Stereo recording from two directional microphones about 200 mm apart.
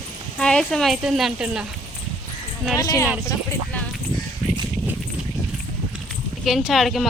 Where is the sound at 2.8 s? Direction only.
20° left (ahead or behind).